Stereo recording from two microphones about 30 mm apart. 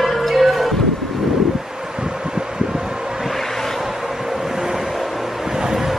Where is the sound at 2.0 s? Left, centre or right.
Right.